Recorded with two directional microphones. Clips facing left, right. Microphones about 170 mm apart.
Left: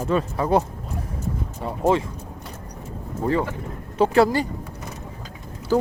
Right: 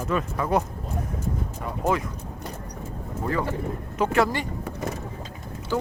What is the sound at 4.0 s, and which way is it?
Speech, 30° left (ahead or behind).